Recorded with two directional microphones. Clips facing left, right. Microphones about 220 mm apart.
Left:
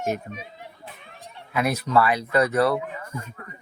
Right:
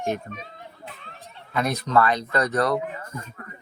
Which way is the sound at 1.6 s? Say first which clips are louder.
Even; 5° left (ahead or behind).